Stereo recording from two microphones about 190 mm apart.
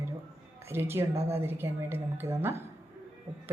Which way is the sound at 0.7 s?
10° right (ahead or behind).